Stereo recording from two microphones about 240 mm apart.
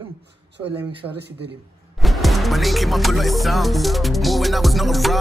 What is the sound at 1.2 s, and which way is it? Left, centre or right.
Speech, right.